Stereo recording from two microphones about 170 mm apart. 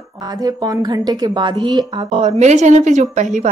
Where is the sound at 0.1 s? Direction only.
20° right (ahead or behind).